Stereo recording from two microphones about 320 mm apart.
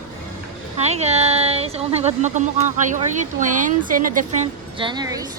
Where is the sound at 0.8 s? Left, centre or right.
Centre.